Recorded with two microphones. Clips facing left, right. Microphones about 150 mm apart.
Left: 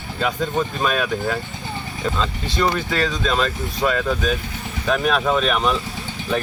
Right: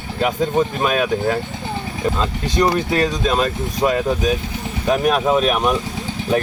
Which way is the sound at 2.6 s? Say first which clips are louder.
Right 4 dB; 35° right (ahead or behind).